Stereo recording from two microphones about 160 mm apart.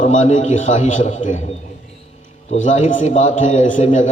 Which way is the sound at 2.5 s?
50° left (ahead or behind).